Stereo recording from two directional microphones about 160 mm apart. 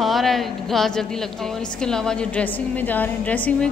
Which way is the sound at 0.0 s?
Centre (ahead or behind).